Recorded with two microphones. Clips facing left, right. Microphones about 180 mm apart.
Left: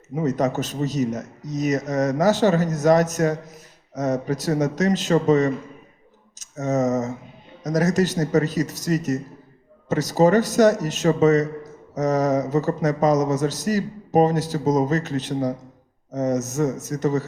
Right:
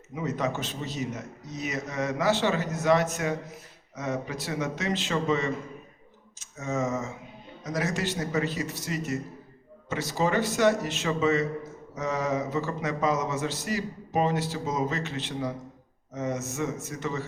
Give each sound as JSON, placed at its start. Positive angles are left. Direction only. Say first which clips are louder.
{"t": 0.1, "sound": "a man's voice", "louder": "left 8 dB", "side_deg": 40}